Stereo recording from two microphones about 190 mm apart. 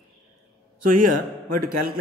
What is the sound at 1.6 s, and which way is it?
Speech, 50° right (ahead or behind).